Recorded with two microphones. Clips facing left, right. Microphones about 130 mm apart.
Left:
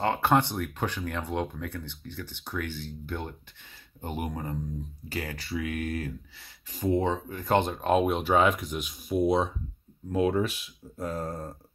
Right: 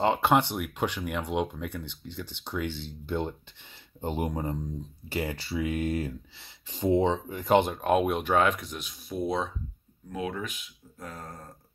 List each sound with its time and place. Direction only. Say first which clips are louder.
0.0 s speech: right 1 dB; 15° right (ahead or behind)
7.7 s speech: even; 5° right (ahead or behind)
10.1 s speech: left 8 dB; 35° left (ahead or behind)